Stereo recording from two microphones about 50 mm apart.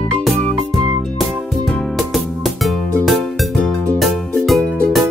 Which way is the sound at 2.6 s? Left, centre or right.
Centre.